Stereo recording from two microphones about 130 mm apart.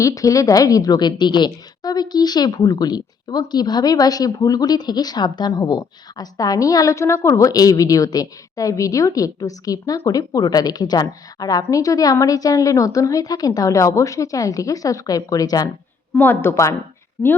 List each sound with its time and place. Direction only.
0.0 s a woman's voice: 25° left (ahead or behind)
16.1 s a woman's voice: 15° left (ahead or behind)